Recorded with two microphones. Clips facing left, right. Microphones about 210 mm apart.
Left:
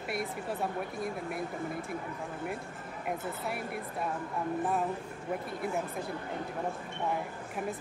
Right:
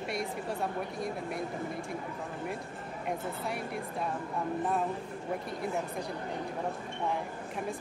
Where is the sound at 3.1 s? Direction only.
5° left (ahead or behind).